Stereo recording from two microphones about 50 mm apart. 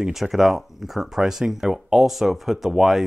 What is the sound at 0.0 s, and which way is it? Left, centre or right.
Speech, centre.